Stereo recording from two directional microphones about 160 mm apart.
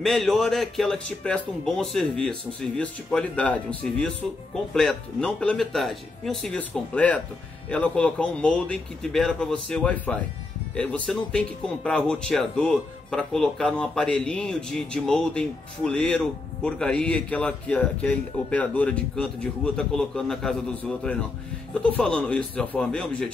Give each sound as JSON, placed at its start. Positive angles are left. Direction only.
{"t": 0.0, "sound": "a man's voice", "side_deg": 0}
{"t": 21.8, "sound": "speech", "side_deg": 5}